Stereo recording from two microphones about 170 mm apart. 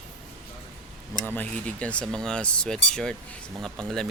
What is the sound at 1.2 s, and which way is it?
Speech, 10° left (ahead or behind).